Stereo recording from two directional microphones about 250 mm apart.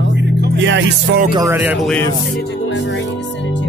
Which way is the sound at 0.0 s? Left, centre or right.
Right.